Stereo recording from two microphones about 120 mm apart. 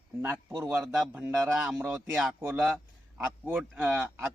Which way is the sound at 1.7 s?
15° right (ahead or behind).